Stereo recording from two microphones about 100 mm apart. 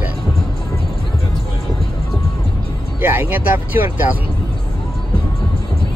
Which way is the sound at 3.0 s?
20° right (ahead or behind).